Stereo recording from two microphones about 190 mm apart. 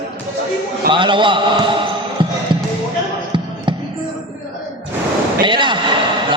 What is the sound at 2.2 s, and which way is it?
Basketball bounce, 25° right (ahead or behind).